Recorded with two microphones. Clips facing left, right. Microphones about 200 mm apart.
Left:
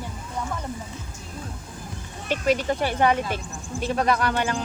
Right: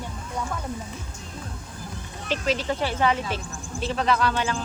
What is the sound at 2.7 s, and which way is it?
Speech, 50° left (ahead or behind).